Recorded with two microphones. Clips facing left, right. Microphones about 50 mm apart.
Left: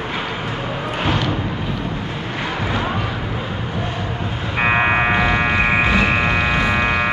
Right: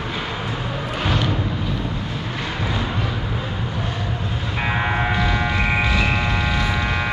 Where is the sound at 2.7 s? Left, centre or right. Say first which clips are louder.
Left 4 dB; left.